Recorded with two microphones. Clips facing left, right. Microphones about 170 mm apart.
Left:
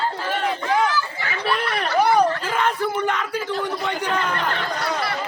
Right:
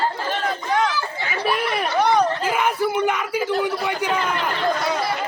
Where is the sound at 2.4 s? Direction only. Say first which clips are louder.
Right 2 dB; 10° right (ahead or behind).